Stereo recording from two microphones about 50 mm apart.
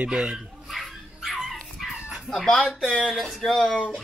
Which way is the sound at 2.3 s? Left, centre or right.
Centre.